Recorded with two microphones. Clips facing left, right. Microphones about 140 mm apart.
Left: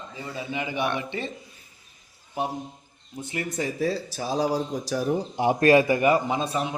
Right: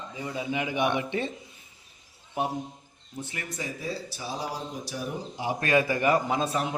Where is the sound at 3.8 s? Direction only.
90° left.